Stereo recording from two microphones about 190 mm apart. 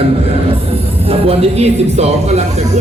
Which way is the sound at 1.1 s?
30° right (ahead or behind).